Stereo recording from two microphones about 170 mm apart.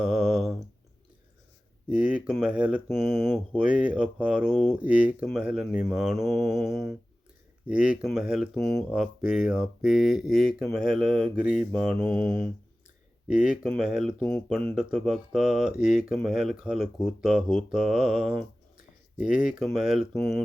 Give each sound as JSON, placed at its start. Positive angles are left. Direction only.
{"t": 0.0, "sound": "a sound", "side_deg": -5}
{"t": 1.9, "sound": "speech", "side_deg": -10}
{"t": 12.0, "sound": "mantra", "side_deg": -25}
{"t": 13.2, "sound": "speech", "side_deg": -5}